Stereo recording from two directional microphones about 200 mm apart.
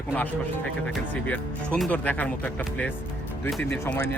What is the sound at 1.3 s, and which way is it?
Speech, 5° left (ahead or behind).